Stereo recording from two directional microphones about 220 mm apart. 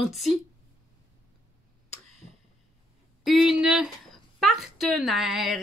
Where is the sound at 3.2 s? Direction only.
Centre (ahead or behind).